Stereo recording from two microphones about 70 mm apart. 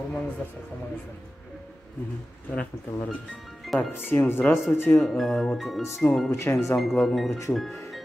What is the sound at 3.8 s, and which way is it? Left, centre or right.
Speech, left.